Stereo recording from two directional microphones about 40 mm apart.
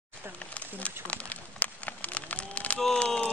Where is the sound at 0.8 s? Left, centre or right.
Left.